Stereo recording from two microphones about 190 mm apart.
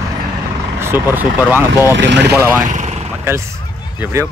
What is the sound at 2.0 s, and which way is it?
Speech, 65° right (ahead or behind).